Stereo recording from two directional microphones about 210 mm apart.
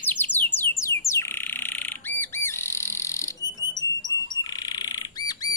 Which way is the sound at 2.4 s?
10° left (ahead or behind).